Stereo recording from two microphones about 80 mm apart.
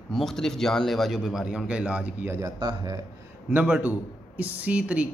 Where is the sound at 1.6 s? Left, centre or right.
Centre.